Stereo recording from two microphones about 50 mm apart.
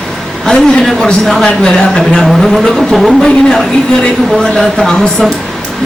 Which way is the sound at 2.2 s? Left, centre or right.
Centre.